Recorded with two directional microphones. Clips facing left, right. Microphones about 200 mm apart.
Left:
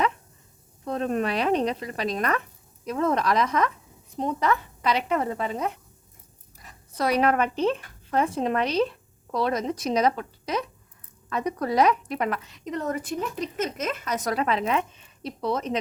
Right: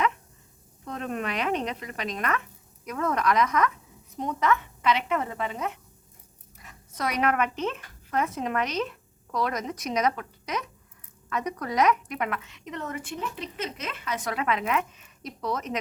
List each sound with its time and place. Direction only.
0.9 s a woman's voice: 35° left (ahead or behind)